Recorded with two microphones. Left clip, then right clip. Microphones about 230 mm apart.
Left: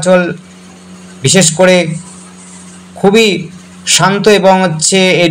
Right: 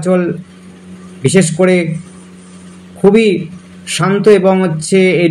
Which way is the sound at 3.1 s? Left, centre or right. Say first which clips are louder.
Left 1 dB; left.